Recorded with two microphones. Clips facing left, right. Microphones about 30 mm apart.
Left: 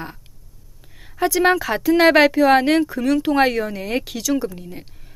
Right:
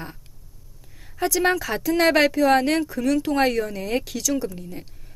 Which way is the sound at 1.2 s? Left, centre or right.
Centre.